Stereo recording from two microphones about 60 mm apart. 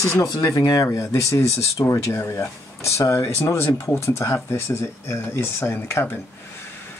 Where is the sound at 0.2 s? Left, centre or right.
Left.